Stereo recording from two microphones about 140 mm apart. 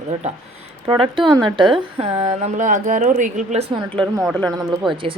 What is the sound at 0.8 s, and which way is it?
Speech, 40° right (ahead or behind).